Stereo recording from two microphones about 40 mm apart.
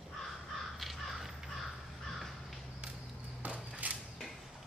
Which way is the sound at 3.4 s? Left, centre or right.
Right.